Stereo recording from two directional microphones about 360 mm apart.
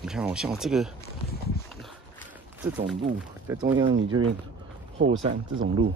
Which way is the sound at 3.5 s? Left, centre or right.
Centre.